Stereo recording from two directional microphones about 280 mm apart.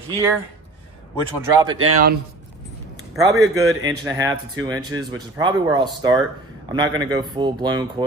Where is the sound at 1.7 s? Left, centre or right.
Right.